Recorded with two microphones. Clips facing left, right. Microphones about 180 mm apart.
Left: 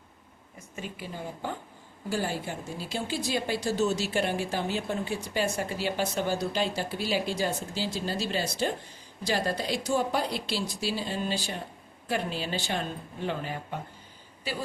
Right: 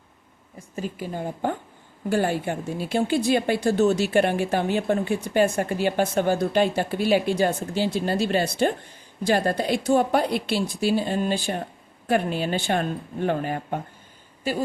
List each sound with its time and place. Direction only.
0.8 s a woman's voice: 45° right (ahead or behind)